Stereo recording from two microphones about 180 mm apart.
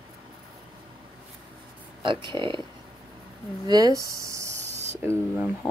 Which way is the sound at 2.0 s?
25° right (ahead or behind).